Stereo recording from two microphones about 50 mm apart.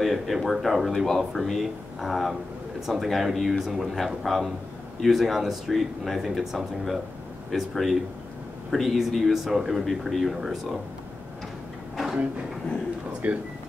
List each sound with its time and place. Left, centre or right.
0.0 s speech: centre
13.2 s speech: right